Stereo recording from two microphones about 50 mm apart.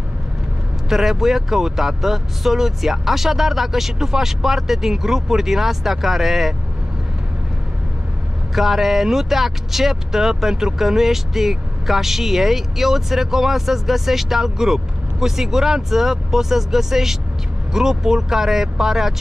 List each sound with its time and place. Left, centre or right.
0.8 s speech: centre
8.5 s speech: centre